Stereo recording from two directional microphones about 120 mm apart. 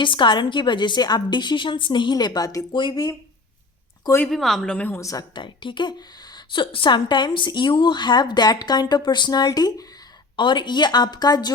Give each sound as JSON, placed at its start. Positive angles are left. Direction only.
{"t": 0.0, "sound": "speech", "side_deg": 40}
{"t": 4.3, "sound": "speech", "side_deg": 0}
{"t": 4.9, "sound": "speech", "side_deg": 25}
{"t": 5.3, "sound": "speech", "side_deg": 40}
{"t": 10.3, "sound": "speech", "side_deg": 40}